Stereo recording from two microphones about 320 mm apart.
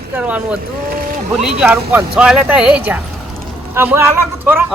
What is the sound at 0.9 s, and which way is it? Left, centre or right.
Boat, right.